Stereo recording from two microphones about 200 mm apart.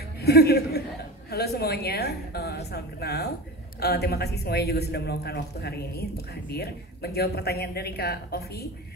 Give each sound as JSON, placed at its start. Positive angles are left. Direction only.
{"t": 0.2, "sound": "speech", "side_deg": 55}